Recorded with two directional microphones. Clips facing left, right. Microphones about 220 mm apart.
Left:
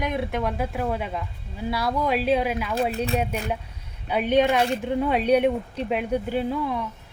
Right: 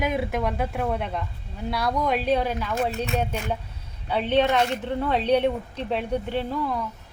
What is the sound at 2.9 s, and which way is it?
Speech, 35° left (ahead or behind).